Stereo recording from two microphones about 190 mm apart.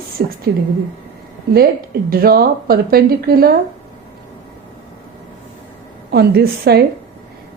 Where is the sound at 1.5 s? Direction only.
55° right (ahead or behind).